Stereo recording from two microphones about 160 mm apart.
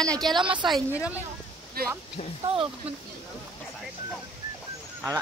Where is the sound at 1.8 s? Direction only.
70° right (ahead or behind).